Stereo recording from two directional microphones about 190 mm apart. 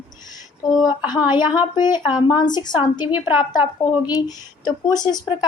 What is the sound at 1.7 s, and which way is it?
Speech, 20° left (ahead or behind).